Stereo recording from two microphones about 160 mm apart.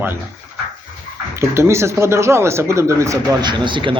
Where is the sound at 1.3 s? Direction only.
15° right (ahead or behind).